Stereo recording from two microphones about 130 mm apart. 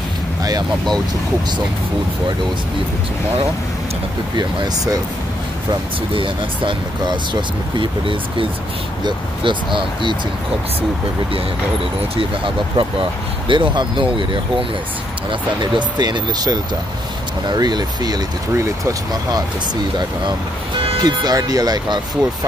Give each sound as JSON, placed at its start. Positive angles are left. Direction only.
{"t": 0.4, "sound": "vehicle", "side_deg": -30}
{"t": 4.4, "sound": "speech", "side_deg": -30}
{"t": 5.7, "sound": "speech", "side_deg": -40}
{"t": 12.2, "sound": "speech", "side_deg": -40}
{"t": 21.0, "sound": "speech", "side_deg": -30}